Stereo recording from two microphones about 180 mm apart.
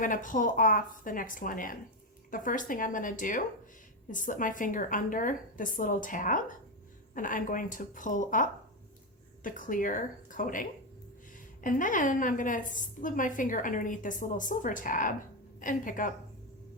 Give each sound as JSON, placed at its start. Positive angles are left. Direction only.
{"t": 0.0, "sound": "a woman's voice", "side_deg": 45}